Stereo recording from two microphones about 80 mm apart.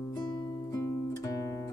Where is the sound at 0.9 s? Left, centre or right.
Left.